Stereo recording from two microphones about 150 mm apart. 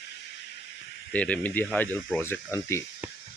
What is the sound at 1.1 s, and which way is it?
Speech, 10° left (ahead or behind).